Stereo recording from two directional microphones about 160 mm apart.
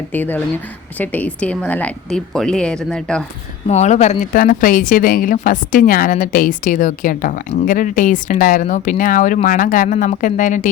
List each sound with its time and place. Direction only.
0.1 s a woman's voice: 10° left (ahead or behind)
3.7 s speech: 45° left (ahead or behind)